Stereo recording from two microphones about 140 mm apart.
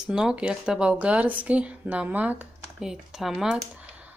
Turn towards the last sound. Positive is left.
turn(degrees=-5)  # may be behind; listen again after turning